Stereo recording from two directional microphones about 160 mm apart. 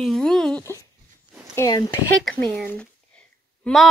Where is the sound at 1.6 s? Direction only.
25° left (ahead or behind).